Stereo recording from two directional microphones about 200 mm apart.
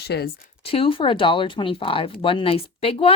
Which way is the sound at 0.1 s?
60° left (ahead or behind).